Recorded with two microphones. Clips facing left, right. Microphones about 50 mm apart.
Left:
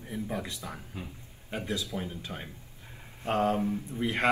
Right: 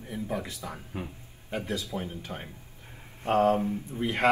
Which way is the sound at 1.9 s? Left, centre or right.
Right.